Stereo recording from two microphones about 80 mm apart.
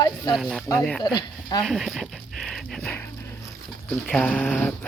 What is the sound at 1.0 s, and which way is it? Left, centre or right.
Speech, left.